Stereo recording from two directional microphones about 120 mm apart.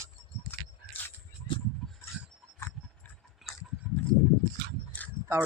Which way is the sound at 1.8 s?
5° left (ahead or behind).